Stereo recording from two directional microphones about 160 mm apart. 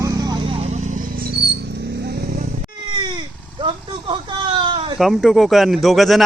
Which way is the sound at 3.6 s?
30° right (ahead or behind).